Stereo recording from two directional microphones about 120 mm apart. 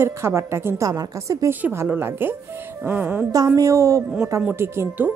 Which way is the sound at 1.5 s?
15° right (ahead or behind).